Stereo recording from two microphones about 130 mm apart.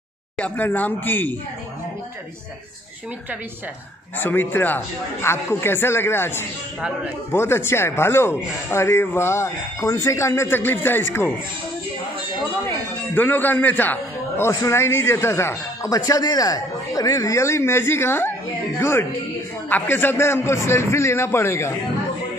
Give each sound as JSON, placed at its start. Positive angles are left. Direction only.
{"t": 0.4, "sound": "speech", "side_deg": 15}
{"t": 4.2, "sound": "a man's voice", "side_deg": 15}
{"t": 13.1, "sound": "a man's voice", "side_deg": 15}